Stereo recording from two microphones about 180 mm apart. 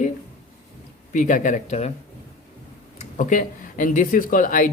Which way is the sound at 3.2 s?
45° left (ahead or behind).